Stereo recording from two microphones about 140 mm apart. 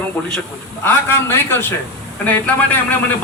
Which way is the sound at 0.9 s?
15° left (ahead or behind).